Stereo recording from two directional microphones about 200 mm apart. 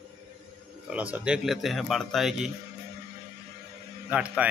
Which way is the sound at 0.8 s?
5° right (ahead or behind).